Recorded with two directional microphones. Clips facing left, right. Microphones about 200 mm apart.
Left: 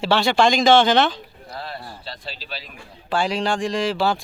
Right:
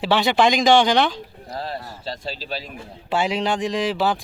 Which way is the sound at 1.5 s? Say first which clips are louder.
Right 3 dB; 40° right (ahead or behind).